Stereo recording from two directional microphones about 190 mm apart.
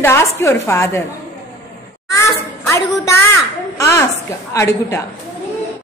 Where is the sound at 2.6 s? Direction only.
15° left (ahead or behind).